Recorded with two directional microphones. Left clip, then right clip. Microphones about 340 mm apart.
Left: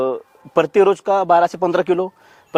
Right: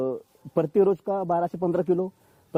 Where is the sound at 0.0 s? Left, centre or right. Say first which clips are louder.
Left 8 dB; centre.